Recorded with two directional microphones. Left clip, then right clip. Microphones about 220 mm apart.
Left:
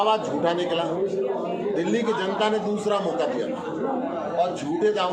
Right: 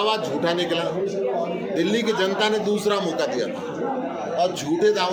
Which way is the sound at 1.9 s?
40° right (ahead or behind).